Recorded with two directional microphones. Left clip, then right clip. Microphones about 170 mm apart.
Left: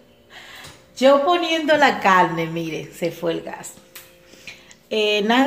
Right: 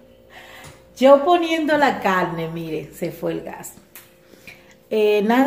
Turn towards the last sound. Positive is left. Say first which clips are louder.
# right 1 dB
turn(degrees=-10)  # may be behind; listen again after turning